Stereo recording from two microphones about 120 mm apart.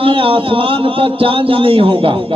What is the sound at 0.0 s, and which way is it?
A man's voice, 50° right (ahead or behind).